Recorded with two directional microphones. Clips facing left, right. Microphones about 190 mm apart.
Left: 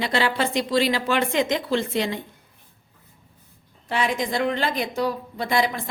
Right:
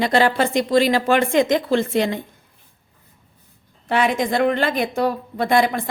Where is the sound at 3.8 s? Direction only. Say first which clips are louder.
Right 5 dB; 60° right (ahead or behind).